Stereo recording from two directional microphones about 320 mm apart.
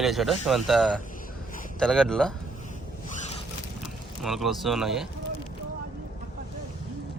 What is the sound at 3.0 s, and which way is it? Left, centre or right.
Zipper, left.